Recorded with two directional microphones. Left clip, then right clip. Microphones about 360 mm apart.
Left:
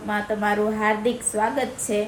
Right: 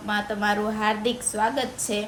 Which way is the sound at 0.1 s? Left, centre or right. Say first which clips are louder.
Left 1 dB; centre.